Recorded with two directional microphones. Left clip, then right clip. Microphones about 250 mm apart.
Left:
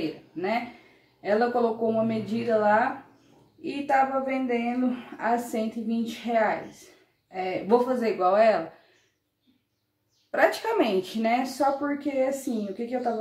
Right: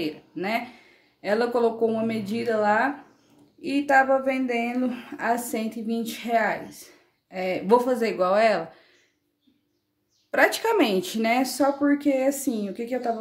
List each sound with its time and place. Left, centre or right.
1.2 s speech: right
10.3 s speech: right